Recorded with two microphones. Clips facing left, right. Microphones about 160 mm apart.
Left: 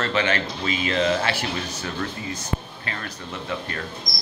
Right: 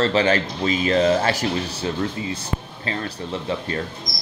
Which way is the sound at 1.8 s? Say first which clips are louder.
Right 5 dB; 25° right (ahead or behind).